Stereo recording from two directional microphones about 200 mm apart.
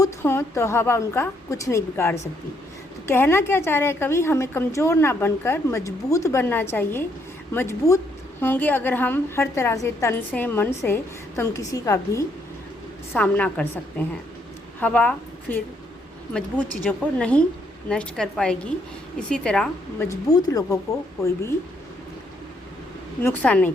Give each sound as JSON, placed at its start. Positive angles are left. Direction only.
{"t": 0.0, "sound": "a woman's voice", "side_deg": 10}
{"t": 14.8, "sound": "a woman's voice", "side_deg": 5}
{"t": 20.1, "sound": "a woman's voice", "side_deg": 20}
{"t": 23.2, "sound": "a woman's voice", "side_deg": 10}